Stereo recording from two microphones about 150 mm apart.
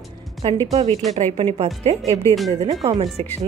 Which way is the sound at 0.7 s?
45° right (ahead or behind).